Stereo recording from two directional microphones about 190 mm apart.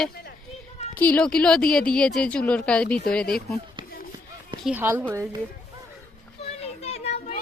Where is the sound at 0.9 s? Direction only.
10° left (ahead or behind).